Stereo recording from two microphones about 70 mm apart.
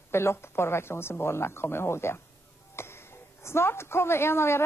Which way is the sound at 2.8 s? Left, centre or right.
Left.